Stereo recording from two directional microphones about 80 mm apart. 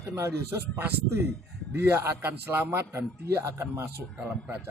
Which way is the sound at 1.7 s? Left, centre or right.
Right.